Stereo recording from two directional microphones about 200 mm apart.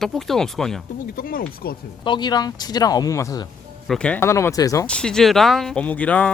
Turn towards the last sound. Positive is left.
turn(degrees=5)  # may be behind; listen again after turning